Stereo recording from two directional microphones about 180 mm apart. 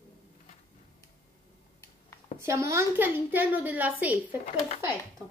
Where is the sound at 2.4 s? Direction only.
15° right (ahead or behind).